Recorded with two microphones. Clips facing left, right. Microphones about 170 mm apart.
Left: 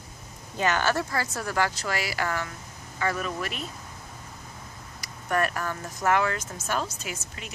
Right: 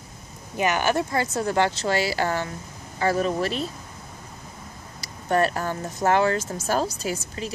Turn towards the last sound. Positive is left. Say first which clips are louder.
# right 6 dB
turn(degrees=-35)  # may be behind; listen again after turning